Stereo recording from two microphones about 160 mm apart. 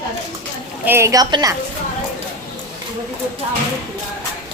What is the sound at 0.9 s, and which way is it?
Speech, 15° right (ahead or behind).